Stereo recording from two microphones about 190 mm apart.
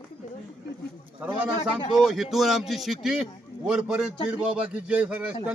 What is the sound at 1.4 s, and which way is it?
A man's voice, 5° right (ahead or behind).